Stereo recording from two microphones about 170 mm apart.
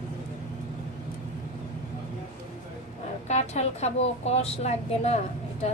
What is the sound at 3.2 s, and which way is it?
Speech, 40° left (ahead or behind).